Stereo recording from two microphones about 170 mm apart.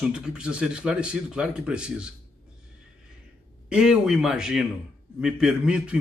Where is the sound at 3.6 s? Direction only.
5° right (ahead or behind).